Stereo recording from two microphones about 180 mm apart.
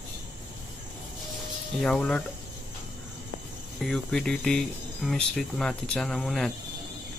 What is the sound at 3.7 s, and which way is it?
Speech, centre (ahead or behind).